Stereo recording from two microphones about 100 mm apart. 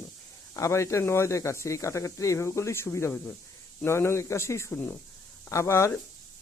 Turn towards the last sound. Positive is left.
turn(degrees=25)  # may be behind; listen again after turning